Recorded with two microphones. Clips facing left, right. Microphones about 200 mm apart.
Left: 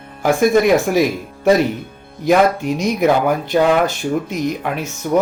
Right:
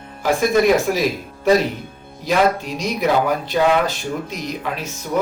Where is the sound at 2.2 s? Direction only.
50° left (ahead or behind).